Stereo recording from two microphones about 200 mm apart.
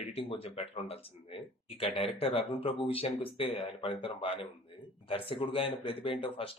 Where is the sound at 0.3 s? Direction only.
25° left (ahead or behind).